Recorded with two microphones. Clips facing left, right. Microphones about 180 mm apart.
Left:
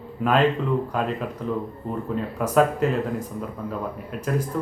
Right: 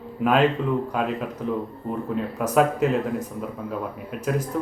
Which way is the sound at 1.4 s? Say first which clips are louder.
Right 1 dB; 5° right (ahead or behind).